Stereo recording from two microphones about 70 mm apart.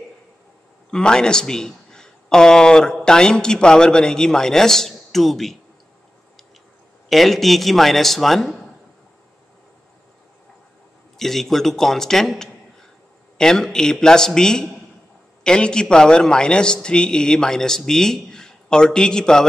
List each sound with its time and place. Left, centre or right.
0.9 s a man's voice: centre
7.1 s a man's voice: centre
11.1 s a man's voice: centre